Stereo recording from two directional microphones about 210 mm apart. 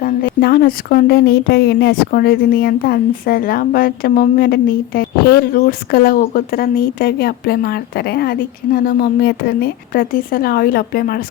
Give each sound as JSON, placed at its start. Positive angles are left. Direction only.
{"t": 0.0, "sound": "speech", "side_deg": 45}